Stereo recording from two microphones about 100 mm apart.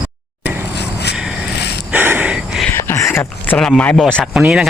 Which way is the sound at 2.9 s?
25° left (ahead or behind).